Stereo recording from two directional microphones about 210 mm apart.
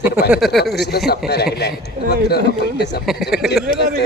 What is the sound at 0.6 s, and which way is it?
Speech, 50° left (ahead or behind).